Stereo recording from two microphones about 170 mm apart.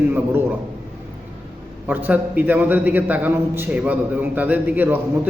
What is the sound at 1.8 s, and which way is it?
A man's voice, 10° right (ahead or behind).